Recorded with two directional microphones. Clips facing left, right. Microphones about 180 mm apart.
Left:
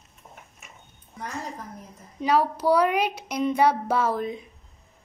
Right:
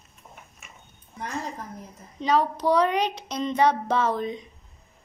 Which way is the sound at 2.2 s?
5° left (ahead or behind).